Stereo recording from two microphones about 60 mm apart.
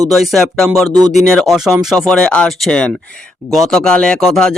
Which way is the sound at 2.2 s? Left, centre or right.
Centre.